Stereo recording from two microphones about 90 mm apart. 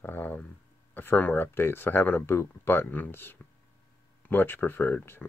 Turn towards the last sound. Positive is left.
turn(degrees=20)  # may be behind; listen again after turning